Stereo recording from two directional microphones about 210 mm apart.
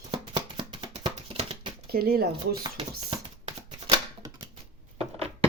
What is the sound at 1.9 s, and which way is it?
Speech, 45° right (ahead or behind).